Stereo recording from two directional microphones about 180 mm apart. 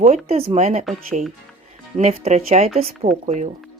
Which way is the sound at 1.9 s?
35° right (ahead or behind).